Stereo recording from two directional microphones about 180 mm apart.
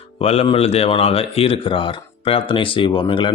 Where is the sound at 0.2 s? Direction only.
35° left (ahead or behind).